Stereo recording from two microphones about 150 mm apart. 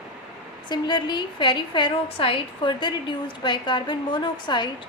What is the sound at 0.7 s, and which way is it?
A woman's voice, 30° left (ahead or behind).